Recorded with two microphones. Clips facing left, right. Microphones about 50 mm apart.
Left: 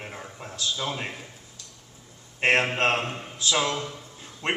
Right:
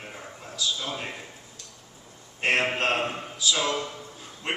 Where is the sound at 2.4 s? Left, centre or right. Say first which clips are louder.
Left 2 dB; left.